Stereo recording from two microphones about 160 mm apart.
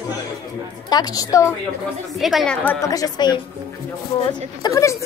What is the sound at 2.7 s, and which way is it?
Speech, 20° left (ahead or behind).